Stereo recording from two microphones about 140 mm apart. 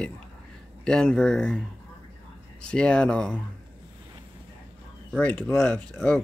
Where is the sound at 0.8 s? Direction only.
5° left (ahead or behind).